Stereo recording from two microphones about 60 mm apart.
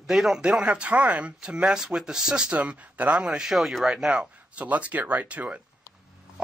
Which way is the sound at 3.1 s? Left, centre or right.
Centre.